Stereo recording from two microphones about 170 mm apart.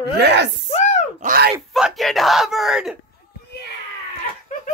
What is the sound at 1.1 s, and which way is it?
Speech, 60° right (ahead or behind).